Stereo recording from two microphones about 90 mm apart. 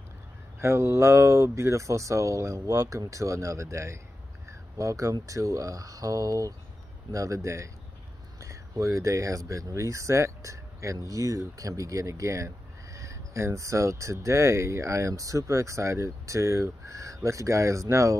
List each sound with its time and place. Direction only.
0.6 s speech: 30° right (ahead or behind)
4.5 s a sound: 35° right (ahead or behind)
5.2 s speech: 35° right (ahead or behind)